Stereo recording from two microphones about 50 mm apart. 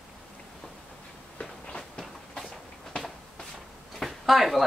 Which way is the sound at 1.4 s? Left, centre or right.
Centre.